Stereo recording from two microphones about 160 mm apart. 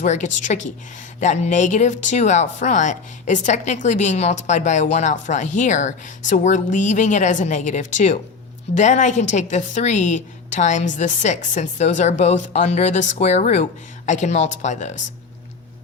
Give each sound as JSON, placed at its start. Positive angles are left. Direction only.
{"t": 0.0, "sound": "speech", "side_deg": 50}